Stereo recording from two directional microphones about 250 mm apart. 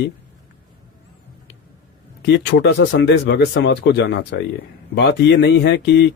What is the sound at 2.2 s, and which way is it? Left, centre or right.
Speech, left.